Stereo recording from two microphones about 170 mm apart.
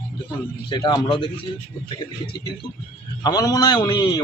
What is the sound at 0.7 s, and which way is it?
Speech, 25° left (ahead or behind).